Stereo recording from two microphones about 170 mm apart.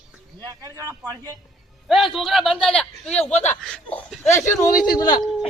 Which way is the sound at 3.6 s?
5° left (ahead or behind).